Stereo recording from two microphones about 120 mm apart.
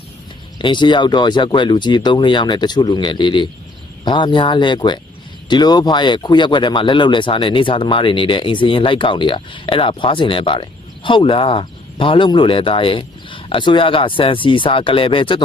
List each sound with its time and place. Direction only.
0.6 s speech: 40° left (ahead or behind)